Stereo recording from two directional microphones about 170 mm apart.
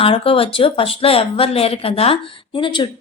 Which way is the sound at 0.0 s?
35° left (ahead or behind).